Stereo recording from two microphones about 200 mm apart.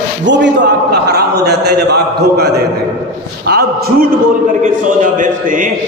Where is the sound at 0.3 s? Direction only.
60° right (ahead or behind).